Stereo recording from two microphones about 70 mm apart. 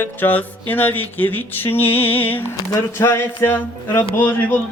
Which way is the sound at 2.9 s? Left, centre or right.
Left.